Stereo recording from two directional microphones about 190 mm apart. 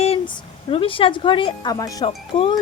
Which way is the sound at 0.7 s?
30° left (ahead or behind).